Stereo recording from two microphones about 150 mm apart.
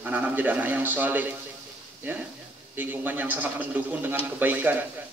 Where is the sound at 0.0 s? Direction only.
10° right (ahead or behind).